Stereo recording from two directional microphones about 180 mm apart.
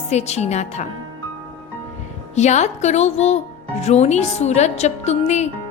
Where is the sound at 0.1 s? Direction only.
40° left (ahead or behind).